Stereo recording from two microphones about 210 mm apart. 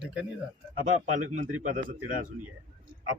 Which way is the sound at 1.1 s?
35° right (ahead or behind).